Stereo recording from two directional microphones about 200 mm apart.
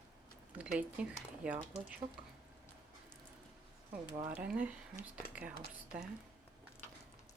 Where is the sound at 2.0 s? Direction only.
25° right (ahead or behind).